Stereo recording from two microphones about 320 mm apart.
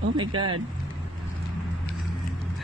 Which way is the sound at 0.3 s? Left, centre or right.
Right.